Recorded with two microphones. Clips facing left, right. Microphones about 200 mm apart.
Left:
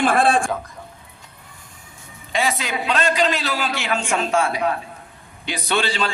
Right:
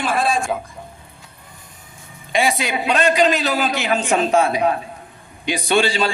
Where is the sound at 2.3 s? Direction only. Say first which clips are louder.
Right 3 dB; 15° right (ahead or behind).